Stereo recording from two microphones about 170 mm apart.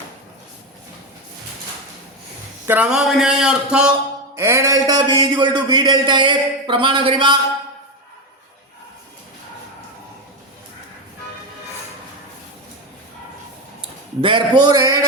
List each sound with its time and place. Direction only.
2.6 s speech: 5° right (ahead or behind)
4.4 s a man's voice: 15° right (ahead or behind)
14.2 s a man's voice: 30° right (ahead or behind)